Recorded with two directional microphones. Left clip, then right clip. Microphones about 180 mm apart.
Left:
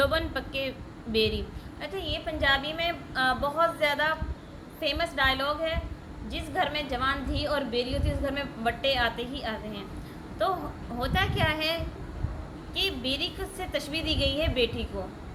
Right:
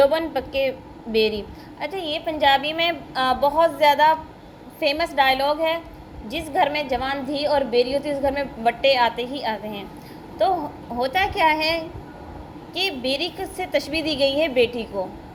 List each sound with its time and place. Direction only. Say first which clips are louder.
0.0 s a woman's voice: right 8 dB; 10° right (ahead or behind)
11.0 s a woman's voice: right 8 dB; 15° right (ahead or behind)